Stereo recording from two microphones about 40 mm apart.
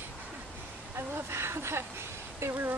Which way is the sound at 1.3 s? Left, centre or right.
Right.